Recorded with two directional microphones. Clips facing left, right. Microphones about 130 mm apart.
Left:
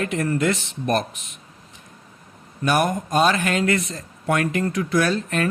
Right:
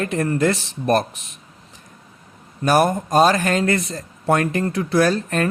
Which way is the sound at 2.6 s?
35° right (ahead or behind).